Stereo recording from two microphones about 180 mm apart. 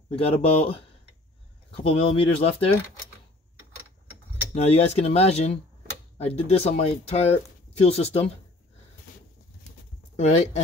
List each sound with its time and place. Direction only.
0.1 s speech: 35° left (ahead or behind)
4.6 s speech: 35° left (ahead or behind)
10.1 s speech: 40° left (ahead or behind)